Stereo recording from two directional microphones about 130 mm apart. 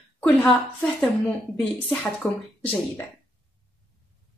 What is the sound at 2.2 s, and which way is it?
Speech, 20° left (ahead or behind).